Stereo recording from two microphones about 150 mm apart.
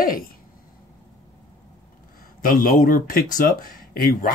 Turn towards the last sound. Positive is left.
turn(degrees=70)  # may be behind; listen again after turning